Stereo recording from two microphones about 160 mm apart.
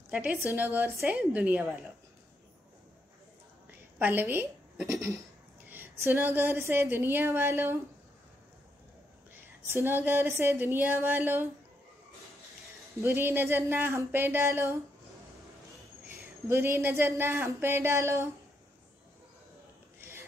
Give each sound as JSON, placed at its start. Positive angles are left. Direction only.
{"t": 0.1, "sound": "a woman's voice", "side_deg": -10}
{"t": 4.0, "sound": "a woman's voice", "side_deg": -15}
{"t": 9.7, "sound": "a woman's voice", "side_deg": -15}
{"t": 13.0, "sound": "a woman's voice", "side_deg": -15}
{"t": 16.4, "sound": "a woman's voice", "side_deg": -15}
{"t": 20.0, "sound": "a sound", "side_deg": -15}